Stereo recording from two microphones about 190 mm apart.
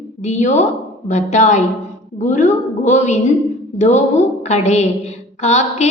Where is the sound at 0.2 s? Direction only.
40° left (ahead or behind).